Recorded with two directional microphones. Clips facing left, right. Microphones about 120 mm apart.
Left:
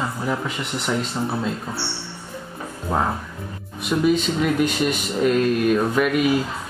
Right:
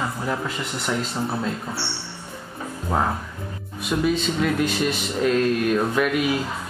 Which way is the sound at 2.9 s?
Centre (ahead or behind).